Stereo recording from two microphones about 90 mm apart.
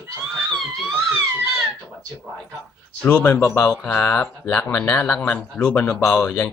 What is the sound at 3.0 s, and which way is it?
Speech, 15° left (ahead or behind).